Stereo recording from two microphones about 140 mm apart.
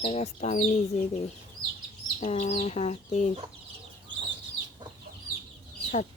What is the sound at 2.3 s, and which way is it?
Speech, 50° left (ahead or behind).